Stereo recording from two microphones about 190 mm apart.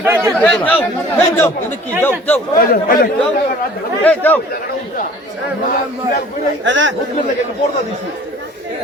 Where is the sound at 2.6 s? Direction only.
50° left (ahead or behind).